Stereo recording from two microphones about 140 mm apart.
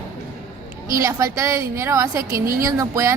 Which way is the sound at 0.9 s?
20° right (ahead or behind).